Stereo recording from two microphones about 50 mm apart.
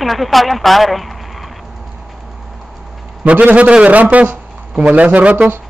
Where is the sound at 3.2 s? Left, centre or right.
Right.